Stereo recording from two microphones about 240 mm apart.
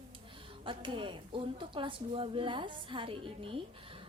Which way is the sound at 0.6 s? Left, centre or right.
Centre.